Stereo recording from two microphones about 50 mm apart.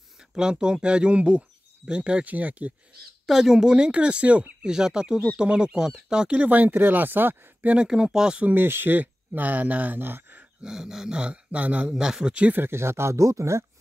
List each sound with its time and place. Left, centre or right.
0.3 s speech: centre
2.2 s speech: right
3.3 s speech: centre; by 4.5 s right
4.6 s speech: centre
6.4 s speech: right
7.9 s speech: centre
8.5 s speech: right
9.9 s speech: right
10.6 s speech: centre
11.1 s speech: right
12.0 s speech: centre
12.5 s speech: right